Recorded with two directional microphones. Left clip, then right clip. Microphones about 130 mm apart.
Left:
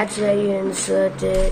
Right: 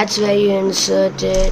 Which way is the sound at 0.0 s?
25° right (ahead or behind).